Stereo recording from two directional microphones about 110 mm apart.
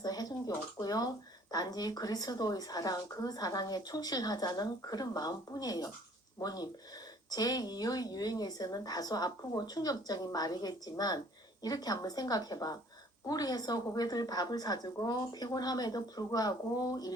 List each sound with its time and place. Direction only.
0.0 s speech: 35° left (ahead or behind)